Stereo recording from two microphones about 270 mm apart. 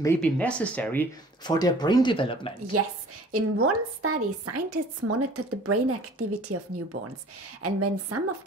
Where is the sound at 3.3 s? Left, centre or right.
Right.